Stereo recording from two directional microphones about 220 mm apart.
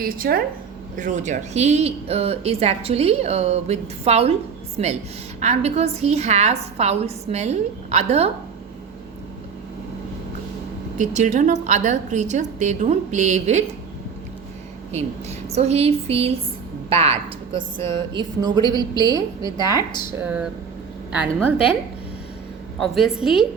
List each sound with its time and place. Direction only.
0.0 s a woman's voice: 40° right (ahead or behind)
10.9 s a woman's voice: 35° right (ahead or behind)
14.9 s a woman's voice: 30° right (ahead or behind); by 21.8 s 5° right (ahead or behind)
22.8 s a woman's voice: centre (ahead or behind)